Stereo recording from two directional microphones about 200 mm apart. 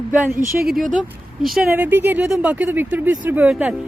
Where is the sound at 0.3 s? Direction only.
45° right (ahead or behind).